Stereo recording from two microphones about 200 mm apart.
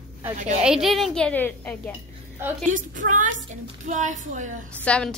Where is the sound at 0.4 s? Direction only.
35° right (ahead or behind).